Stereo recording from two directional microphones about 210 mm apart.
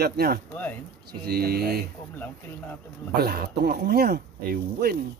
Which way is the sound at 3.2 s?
50° right (ahead or behind).